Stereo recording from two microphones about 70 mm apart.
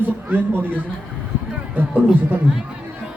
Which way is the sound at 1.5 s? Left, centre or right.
Right.